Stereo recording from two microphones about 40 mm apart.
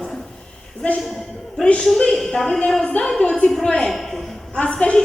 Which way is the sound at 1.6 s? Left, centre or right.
Centre.